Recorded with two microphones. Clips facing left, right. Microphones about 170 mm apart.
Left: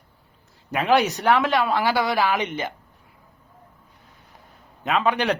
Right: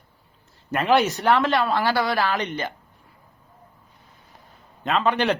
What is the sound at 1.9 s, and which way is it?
Speech, 15° left (ahead or behind).